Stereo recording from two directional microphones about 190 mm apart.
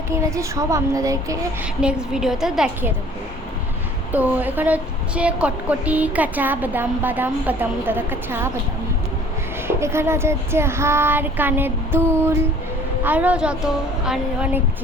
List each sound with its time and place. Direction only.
0.1 s speech: 15° right (ahead or behind)
1.8 s a woman's voice: 5° right (ahead or behind)
4.1 s speech: 10° right (ahead or behind)
9.6 s a woman's voice: 15° right (ahead or behind)